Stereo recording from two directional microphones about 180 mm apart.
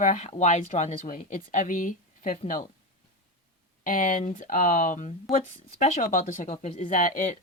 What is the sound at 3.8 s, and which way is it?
Speech, 45° left (ahead or behind).